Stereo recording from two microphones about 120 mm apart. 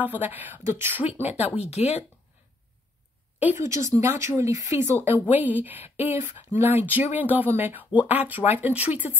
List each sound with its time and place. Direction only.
0.0 s speech: 15° right (ahead or behind)
1.4 s speech: 60° left (ahead or behind)
3.4 s speech: 25° right (ahead or behind)